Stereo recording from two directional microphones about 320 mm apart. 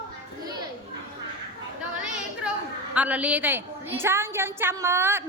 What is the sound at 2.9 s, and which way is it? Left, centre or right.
A woman's voice, centre.